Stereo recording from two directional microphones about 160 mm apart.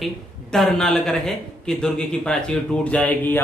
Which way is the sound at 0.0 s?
Centre (ahead or behind).